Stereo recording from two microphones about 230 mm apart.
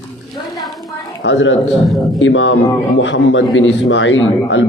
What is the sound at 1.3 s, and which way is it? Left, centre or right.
Speech, left.